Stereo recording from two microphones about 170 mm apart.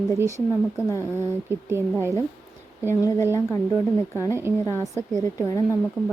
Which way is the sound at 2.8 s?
15° left (ahead or behind).